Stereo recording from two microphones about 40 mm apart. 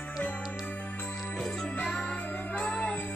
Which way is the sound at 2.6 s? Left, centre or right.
Left.